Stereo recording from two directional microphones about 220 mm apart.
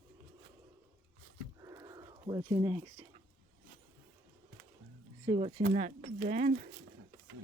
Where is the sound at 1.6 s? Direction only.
15° right (ahead or behind).